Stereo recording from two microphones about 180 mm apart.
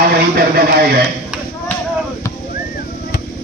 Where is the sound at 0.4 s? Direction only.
55° right (ahead or behind).